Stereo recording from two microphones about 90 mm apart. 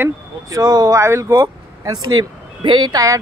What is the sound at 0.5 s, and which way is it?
Speech, 45° right (ahead or behind).